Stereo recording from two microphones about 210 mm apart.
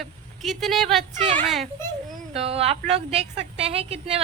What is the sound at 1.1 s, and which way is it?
A woman's voice, 35° right (ahead or behind).